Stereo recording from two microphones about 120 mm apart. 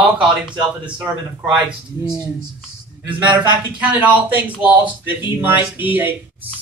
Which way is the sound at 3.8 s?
10° right (ahead or behind).